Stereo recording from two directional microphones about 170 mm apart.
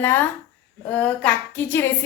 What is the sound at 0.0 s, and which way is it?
A woman's voice, 15° left (ahead or behind).